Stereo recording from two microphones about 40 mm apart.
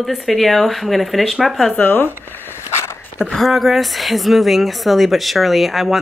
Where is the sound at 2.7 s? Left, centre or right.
Left.